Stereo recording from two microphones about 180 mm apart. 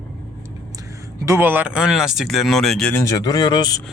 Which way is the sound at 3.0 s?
20° left (ahead or behind).